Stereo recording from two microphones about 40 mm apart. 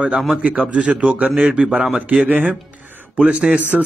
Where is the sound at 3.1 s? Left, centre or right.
Right.